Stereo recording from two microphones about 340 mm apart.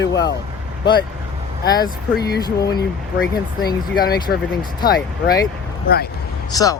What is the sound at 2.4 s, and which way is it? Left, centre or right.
Speech, centre.